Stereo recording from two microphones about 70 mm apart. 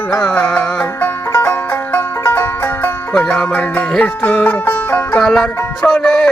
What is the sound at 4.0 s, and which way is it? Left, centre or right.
Speech, left.